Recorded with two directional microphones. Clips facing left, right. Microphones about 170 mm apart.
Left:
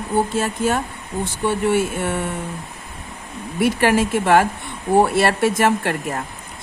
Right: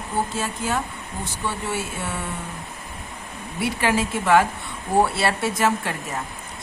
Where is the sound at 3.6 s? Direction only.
50° left (ahead or behind).